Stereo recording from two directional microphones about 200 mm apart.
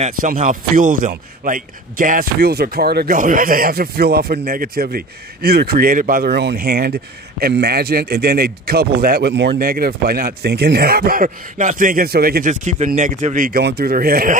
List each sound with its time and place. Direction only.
0.0 s a man's voice: 40° right (ahead or behind)